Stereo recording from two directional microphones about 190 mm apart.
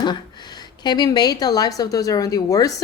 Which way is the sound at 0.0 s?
25° left (ahead or behind).